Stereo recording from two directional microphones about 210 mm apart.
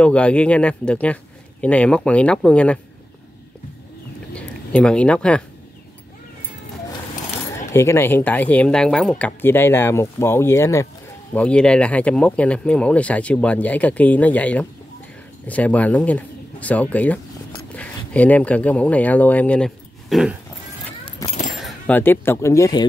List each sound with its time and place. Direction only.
0.0 s speech: 5° left (ahead or behind)
4.4 s speech: 5° left (ahead or behind)
7.7 s speech: 10° left (ahead or behind)
21.0 s keys jangling: 25° left (ahead or behind)
21.5 s speech: 5° left (ahead or behind)